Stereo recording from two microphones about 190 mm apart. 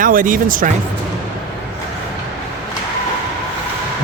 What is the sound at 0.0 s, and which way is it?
Speech, 45° right (ahead or behind).